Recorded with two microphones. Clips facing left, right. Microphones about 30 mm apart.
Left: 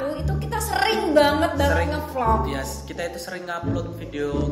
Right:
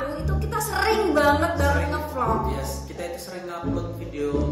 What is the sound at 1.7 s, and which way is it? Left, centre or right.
Speech, left.